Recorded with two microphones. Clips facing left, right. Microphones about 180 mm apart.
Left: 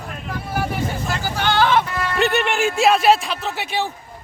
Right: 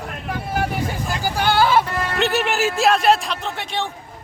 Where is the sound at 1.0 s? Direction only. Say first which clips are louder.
Right 3 dB; 10° right (ahead or behind).